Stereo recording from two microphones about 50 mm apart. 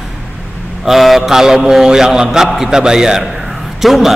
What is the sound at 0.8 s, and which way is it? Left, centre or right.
A man's voice, centre.